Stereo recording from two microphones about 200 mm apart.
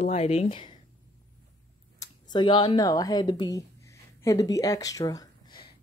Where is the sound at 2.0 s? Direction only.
20° left (ahead or behind).